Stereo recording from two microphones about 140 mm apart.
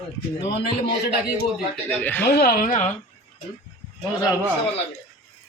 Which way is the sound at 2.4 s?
90° left.